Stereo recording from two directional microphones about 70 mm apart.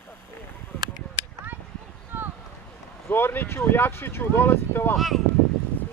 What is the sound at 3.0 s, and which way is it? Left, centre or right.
Speech, left.